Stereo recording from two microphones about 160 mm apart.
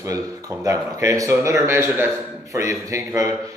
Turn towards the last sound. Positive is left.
turn(degrees=-20)  # may be behind; listen again after turning